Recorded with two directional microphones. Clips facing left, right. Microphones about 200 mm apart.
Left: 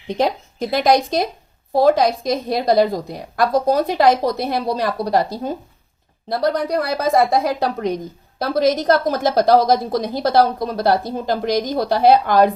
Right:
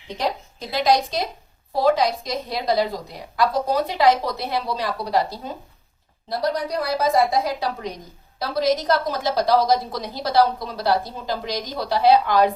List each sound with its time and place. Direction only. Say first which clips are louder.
0.2 s a woman's voice: left 6 dB; 55° left (ahead or behind)